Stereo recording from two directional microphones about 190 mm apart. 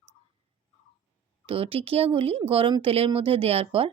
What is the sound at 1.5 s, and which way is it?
Speech, 30° right (ahead or behind).